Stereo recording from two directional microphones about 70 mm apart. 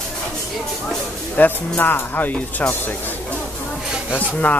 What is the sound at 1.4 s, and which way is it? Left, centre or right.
Speech, left.